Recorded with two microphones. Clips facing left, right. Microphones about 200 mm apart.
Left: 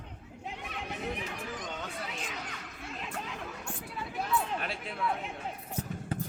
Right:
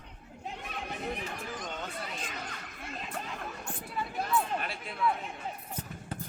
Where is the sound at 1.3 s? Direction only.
70° left (ahead or behind).